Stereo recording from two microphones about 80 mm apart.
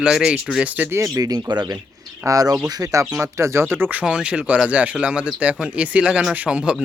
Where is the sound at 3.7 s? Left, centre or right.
Right.